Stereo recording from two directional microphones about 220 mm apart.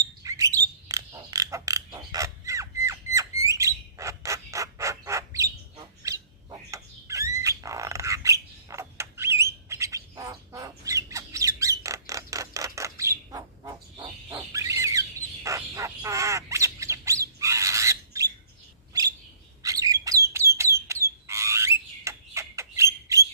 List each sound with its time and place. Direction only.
0.2 s a sound: 15° right (ahead or behind)
3.4 s bird: 15° right (ahead or behind)
19.6 s bird: 15° right (ahead or behind)
20.3 s alarm: 10° right (ahead or behind)
20.8 s frog: 15° right (ahead or behind)